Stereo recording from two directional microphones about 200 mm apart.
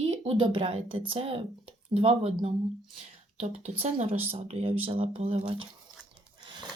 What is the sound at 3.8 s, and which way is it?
Speech, 35° right (ahead or behind).